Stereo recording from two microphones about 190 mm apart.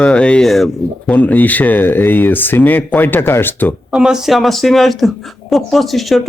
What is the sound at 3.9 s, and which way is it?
A man's voice, 5° right (ahead or behind).